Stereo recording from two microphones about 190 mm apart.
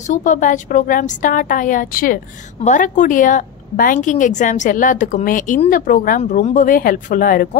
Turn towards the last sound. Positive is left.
turn(degrees=50)  # may be behind; listen again after turning